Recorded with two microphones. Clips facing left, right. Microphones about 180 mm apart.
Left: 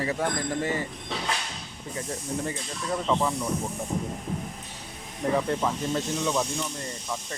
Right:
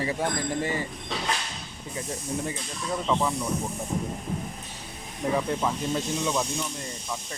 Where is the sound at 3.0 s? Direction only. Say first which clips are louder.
Even; 5° left (ahead or behind).